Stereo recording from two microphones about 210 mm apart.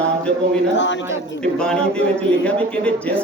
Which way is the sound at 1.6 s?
5° left (ahead or behind).